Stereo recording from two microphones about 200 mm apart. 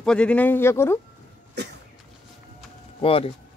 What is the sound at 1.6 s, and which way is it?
Cough, 55° right (ahead or behind).